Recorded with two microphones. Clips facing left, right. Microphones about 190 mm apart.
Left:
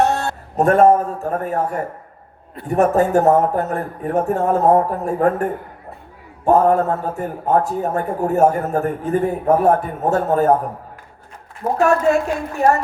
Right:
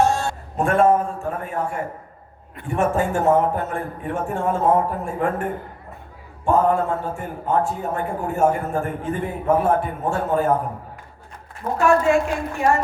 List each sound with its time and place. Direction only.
0.0 s a sound: 65° left (ahead or behind)
0.5 s a man's voice: 40° left (ahead or behind)
6.4 s a man's voice: 40° left (ahead or behind)
11.6 s a man's voice: 35° left (ahead or behind)